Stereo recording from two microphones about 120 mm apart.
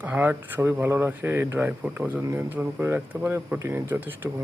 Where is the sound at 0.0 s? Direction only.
15° right (ahead or behind).